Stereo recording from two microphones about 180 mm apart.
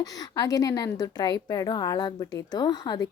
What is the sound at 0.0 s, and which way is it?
Speech, 20° left (ahead or behind).